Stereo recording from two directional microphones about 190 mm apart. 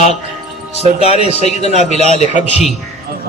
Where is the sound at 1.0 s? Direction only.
35° left (ahead or behind).